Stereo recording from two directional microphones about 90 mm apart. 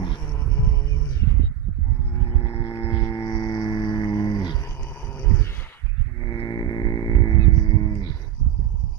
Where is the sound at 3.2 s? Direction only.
55° left (ahead or behind).